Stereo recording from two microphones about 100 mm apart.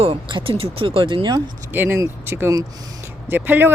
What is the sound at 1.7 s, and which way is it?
Speech, 20° right (ahead or behind).